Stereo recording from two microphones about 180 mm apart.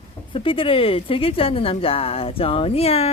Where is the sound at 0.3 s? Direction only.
30° left (ahead or behind).